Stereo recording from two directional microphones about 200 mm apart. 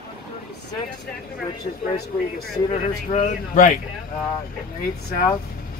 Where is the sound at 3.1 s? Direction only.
40° left (ahead or behind).